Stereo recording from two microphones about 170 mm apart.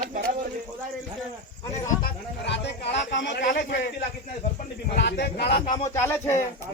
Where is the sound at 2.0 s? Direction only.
90° left.